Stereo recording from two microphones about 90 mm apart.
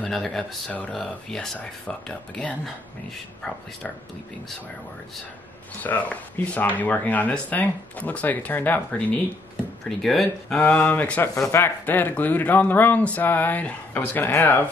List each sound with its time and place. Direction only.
0.1 s speech: 5° left (ahead or behind)
0.7 s speech: 15° left (ahead or behind)
0.9 s speech: 5° left (ahead or behind)
5.8 s speech: 20° left (ahead or behind)
9.8 s speech: 5° left (ahead or behind)
10.6 s speech: 20° left (ahead or behind)